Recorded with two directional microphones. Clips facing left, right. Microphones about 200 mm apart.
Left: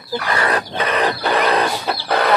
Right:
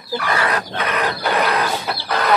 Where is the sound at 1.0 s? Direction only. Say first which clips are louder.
Left 2 dB; 30° left (ahead or behind).